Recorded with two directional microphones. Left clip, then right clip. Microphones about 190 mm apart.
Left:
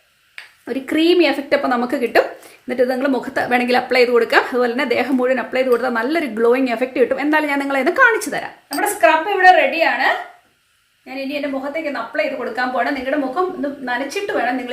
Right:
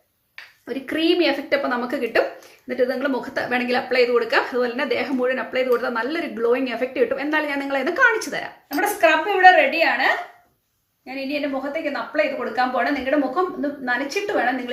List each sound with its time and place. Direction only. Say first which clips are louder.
0.7 s a woman's voice: left 5 dB; 40° left (ahead or behind)
8.7 s a woman's voice: left 3 dB; centre (ahead or behind)